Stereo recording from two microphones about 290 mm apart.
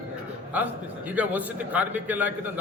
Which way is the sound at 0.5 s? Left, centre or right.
Centre.